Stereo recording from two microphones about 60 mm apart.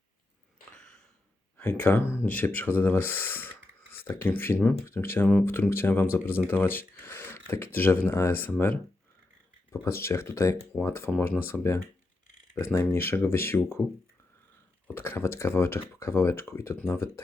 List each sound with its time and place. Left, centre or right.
1.5 s speech: left
9.8 s speech: left
14.9 s speech: left